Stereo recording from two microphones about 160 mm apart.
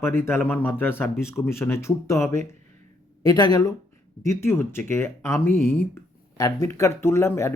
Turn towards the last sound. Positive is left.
turn(degrees=15)  # may be behind; listen again after turning